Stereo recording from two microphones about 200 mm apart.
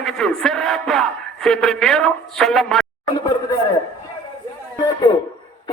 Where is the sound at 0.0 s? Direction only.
Centre (ahead or behind).